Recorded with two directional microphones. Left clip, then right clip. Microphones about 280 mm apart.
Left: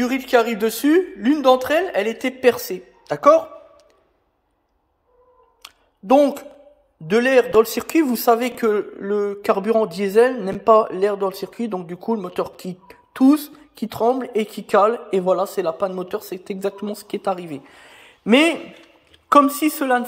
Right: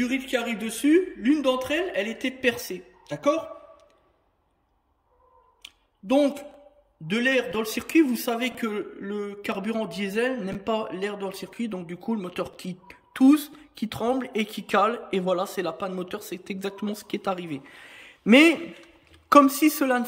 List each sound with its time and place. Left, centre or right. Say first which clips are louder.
0.0 s a man's voice: left 9 dB; centre
5.6 s a sound: left 4 dB; centre
7.1 s a man's voice: left 8 dB; centre
19.6 s a woman's voice: left 3 dB; centre